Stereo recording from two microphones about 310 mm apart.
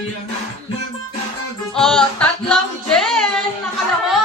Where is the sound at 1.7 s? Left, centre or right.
Centre.